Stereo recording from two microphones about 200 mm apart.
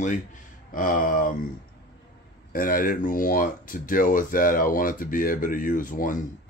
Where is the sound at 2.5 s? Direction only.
45° left (ahead or behind).